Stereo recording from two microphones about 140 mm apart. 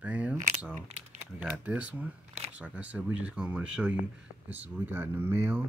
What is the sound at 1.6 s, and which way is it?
Speech, 10° right (ahead or behind).